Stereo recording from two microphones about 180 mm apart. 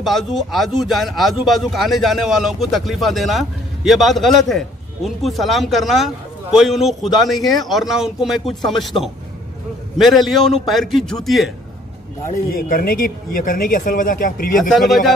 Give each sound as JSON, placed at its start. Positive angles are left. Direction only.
{"t": 0.0, "sound": "speech", "side_deg": 0}
{"t": 12.3, "sound": "speech", "side_deg": 50}
{"t": 14.7, "sound": "speech", "side_deg": 0}